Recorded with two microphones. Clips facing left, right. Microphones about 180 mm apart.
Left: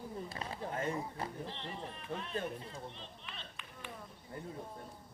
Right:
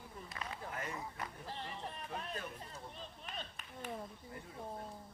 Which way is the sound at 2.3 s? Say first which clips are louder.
Left 6 dB; 35° left (ahead or behind).